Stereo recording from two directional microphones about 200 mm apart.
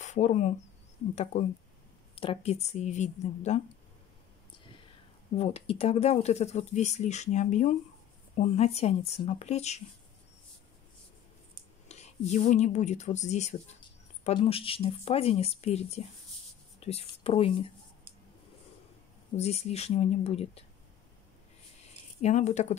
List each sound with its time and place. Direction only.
0.0 s speech: 35° left (ahead or behind)
5.4 s speech: 30° left (ahead or behind)
11.9 s speech: 35° left (ahead or behind)
19.3 s speech: 35° left (ahead or behind)
22.2 s speech: 35° left (ahead or behind)